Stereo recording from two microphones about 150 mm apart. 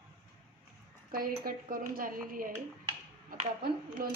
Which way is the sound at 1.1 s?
75° right (ahead or behind).